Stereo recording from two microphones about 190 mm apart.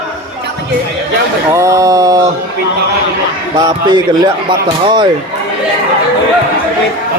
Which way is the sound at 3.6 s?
20° right (ahead or behind).